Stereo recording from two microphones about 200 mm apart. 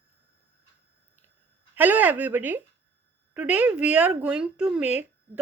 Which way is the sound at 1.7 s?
10° right (ahead or behind).